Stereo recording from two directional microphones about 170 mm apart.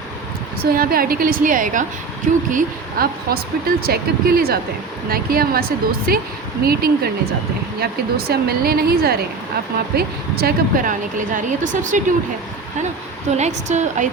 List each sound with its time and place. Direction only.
0.6 s speech: 60° right (ahead or behind)
13.3 s speech: 40° right (ahead or behind)